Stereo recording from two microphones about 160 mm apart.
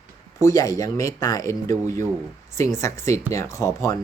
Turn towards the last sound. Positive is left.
turn(degrees=20)  # may be behind; listen again after turning